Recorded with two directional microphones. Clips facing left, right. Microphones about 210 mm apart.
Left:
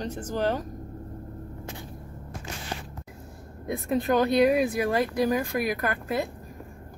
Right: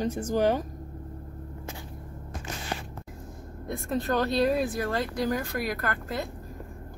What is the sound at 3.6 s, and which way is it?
Speech, 15° left (ahead or behind).